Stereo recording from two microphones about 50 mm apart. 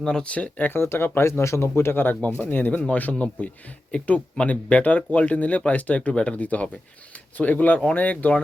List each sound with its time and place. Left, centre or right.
0.0 s speech: centre
0.3 s speech: left
0.8 s speech: left
1.3 s speech: left